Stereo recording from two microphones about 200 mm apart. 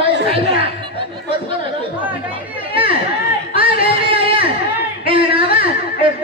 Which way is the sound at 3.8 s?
25° right (ahead or behind).